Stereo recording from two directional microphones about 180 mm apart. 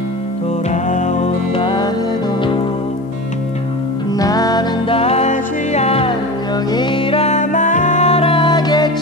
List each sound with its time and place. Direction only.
0.7 s music: 40° left (ahead or behind)
4.2 s music: 20° left (ahead or behind)